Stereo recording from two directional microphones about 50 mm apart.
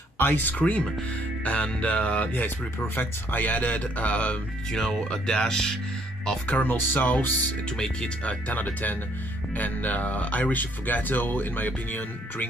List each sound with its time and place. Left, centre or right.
0.2 s speech: left
1.4 s music: left
2.4 s speech: left
4.7 s speech: centre
6.4 s speech: left
7.7 s speech: centre
8.5 s speech: left